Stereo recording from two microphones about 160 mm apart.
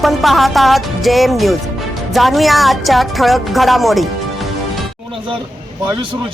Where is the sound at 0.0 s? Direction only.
Centre (ahead or behind).